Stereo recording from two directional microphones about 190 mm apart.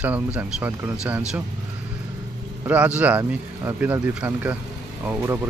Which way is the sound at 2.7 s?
5° right (ahead or behind).